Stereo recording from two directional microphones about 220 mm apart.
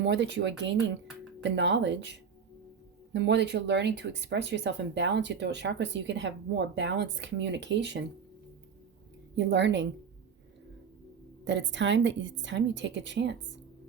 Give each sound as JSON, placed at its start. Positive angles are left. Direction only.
{"t": 0.0, "sound": "a woman's voice", "side_deg": -55}
{"t": 9.3, "sound": "speech", "side_deg": -55}
{"t": 11.4, "sound": "a woman's voice", "side_deg": -55}